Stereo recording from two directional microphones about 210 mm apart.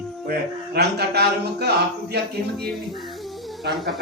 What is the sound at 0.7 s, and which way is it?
Speech, 50° right (ahead or behind).